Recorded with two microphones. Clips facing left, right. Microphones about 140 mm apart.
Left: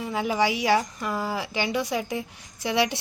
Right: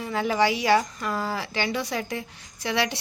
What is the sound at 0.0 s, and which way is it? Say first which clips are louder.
A woman's voice: right 1 dB; 15° left (ahead or behind).